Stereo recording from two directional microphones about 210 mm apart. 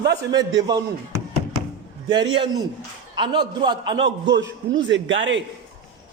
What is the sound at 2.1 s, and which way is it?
A man's voice, 20° right (ahead or behind).